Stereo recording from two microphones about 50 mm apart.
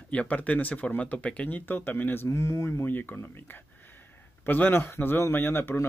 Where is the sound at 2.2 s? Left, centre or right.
Left.